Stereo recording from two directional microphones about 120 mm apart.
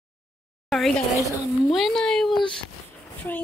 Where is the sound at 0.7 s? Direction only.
5° left (ahead or behind).